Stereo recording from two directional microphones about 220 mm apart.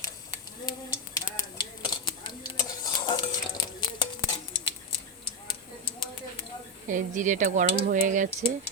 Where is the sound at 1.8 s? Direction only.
20° left (ahead or behind).